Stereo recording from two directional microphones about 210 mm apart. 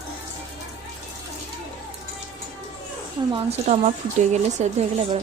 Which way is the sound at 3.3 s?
30° right (ahead or behind).